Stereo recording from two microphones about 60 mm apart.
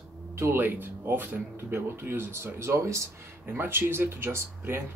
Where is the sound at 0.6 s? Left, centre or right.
Right.